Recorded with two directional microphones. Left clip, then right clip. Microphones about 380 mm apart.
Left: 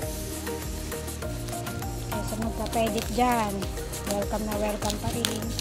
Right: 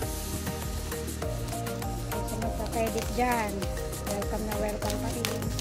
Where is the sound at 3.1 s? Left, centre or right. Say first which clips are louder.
Left 4 dB; centre.